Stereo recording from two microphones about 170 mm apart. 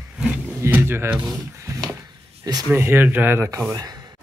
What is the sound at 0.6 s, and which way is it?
Music, 10° right (ahead or behind).